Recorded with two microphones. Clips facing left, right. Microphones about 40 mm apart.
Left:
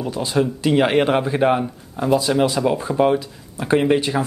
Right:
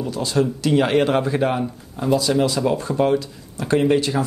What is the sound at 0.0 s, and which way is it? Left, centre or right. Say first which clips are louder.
A man's voice: even; left.